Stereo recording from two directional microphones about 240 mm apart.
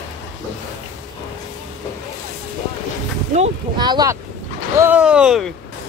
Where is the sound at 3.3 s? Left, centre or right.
Right.